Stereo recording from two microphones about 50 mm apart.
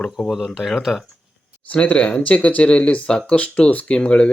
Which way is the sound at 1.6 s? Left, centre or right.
Left.